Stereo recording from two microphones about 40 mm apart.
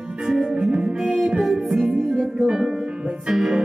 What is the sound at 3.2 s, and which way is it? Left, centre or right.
Music, centre.